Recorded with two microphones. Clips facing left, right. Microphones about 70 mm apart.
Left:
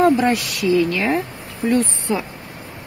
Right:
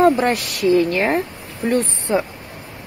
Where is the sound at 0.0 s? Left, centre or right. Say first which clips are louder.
Even; right.